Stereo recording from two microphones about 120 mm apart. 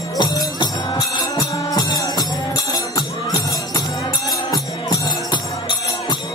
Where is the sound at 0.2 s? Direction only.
35° left (ahead or behind).